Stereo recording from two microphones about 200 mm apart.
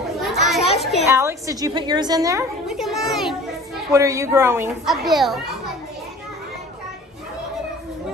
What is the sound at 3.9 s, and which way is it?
Speech, 15° right (ahead or behind).